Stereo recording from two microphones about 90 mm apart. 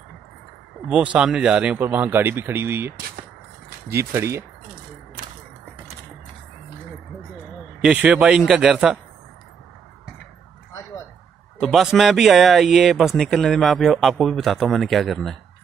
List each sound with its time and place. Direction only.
0.8 s a man's voice: 10° right (ahead or behind)
3.9 s speech: 30° right (ahead or behind)
7.8 s a man's voice: 10° right (ahead or behind)
11.6 s speech: 5° right (ahead or behind)